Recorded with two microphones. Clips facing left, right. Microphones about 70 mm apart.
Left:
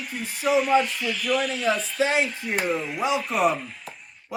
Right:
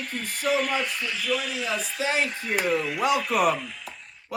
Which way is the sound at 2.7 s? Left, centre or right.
Right.